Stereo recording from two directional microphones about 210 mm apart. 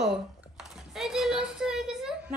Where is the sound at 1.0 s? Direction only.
Centre (ahead or behind).